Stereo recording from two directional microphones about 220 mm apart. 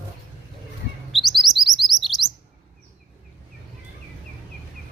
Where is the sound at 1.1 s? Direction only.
Centre (ahead or behind).